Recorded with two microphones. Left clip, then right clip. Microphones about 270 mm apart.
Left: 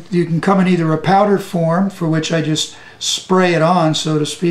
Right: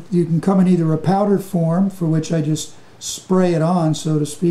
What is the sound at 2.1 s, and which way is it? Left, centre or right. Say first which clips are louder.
Speech: left 7 dB; centre.